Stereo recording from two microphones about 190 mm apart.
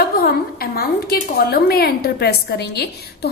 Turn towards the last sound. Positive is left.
turn(degrees=60)  # may be behind; listen again after turning